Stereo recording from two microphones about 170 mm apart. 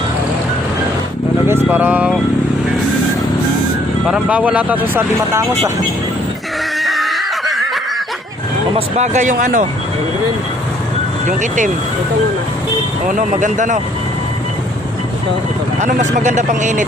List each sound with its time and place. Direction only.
1.6 s speech: 10° right (ahead or behind)
4.0 s speech: 5° right (ahead or behind)
6.7 s a sound: centre (ahead or behind)
8.7 s speech: 45° right (ahead or behind)
11.3 s speech: 50° right (ahead or behind)
13.1 s speech: 50° right (ahead or behind)
15.8 s speech: 45° right (ahead or behind)